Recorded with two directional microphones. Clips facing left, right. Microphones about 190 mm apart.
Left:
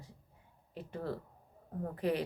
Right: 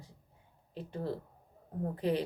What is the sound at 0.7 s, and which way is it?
Speech, 30° right (ahead or behind).